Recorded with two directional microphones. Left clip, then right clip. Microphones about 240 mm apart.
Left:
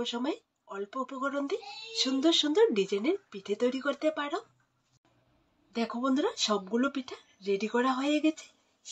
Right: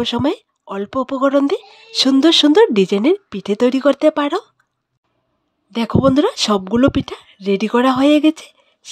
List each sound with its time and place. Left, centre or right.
0.0 s speech: right
5.7 s speech: right